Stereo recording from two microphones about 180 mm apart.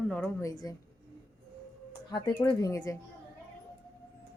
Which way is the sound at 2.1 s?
20° left (ahead or behind).